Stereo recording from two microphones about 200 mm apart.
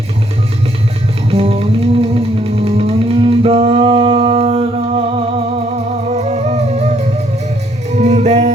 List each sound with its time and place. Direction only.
1.3 s music: 30° right (ahead or behind)